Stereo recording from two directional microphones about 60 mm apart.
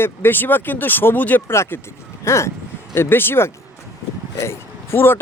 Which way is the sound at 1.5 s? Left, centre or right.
Left.